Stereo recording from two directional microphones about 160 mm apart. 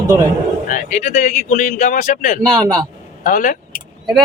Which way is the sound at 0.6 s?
50° left (ahead or behind).